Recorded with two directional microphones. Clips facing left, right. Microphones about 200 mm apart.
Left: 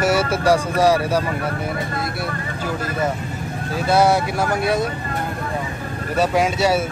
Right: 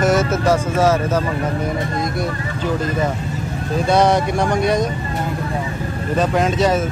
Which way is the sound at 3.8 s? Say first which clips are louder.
Right 1 dB; 5° left (ahead or behind).